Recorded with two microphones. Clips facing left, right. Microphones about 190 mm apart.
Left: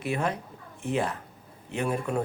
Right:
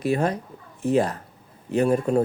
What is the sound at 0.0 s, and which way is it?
A man's voice, 40° right (ahead or behind).